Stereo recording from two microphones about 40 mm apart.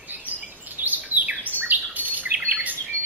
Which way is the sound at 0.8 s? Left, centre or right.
Right.